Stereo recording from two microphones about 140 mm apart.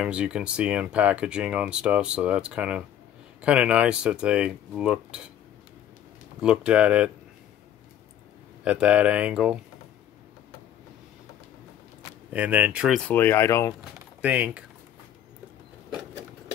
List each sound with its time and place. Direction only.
0.0 s speech: 5° right (ahead or behind)
6.4 s speech: 5° right (ahead or behind)
8.6 s speech: 10° right (ahead or behind)
12.3 s speech: 10° right (ahead or behind)
13.0 s speech: 15° left (ahead or behind)
14.2 s speech: 10° right (ahead or behind)